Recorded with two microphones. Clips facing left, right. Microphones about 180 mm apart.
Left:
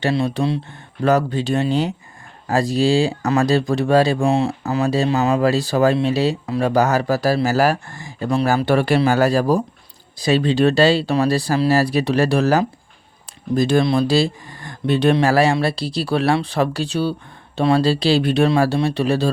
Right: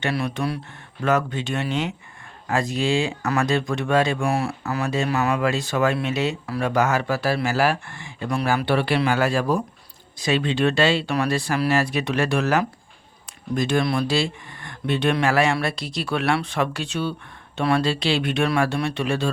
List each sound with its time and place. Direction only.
0.0 s speech: 25° left (ahead or behind)
1.0 s speech: 35° left (ahead or behind)
4.3 s speech: 20° left (ahead or behind)
4.6 s a man's voice: 30° left (ahead or behind)